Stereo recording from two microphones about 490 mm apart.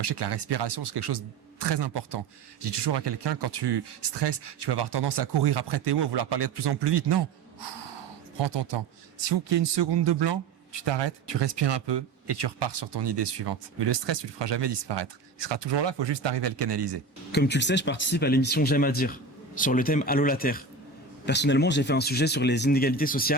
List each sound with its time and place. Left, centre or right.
0.0 s speech: right
17.3 s speech: centre